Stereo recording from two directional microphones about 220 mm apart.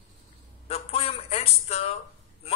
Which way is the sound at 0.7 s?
25° left (ahead or behind).